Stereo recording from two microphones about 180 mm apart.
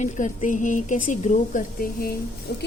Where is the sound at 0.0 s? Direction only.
45° left (ahead or behind).